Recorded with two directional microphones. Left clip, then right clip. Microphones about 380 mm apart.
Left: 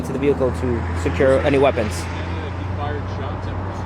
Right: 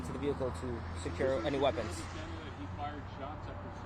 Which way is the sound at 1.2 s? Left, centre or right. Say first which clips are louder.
Left 16 dB; right.